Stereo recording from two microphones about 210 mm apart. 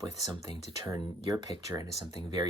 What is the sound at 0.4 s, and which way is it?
Speech, 20° right (ahead or behind).